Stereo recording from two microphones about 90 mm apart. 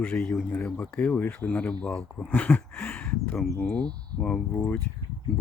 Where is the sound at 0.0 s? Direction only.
20° left (ahead or behind).